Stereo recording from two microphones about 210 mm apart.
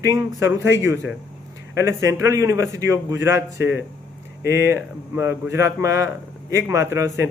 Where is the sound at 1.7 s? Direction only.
15° right (ahead or behind).